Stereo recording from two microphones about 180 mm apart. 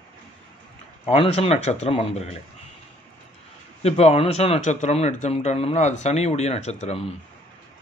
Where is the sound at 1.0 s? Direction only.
35° left (ahead or behind).